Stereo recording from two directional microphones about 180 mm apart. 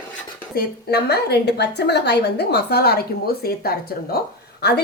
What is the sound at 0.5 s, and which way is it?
A woman's voice, 65° left (ahead or behind).